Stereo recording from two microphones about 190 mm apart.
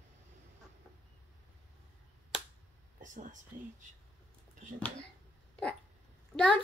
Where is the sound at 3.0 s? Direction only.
40° right (ahead or behind).